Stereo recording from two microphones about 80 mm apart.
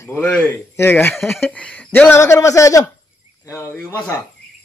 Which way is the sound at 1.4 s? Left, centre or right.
Centre.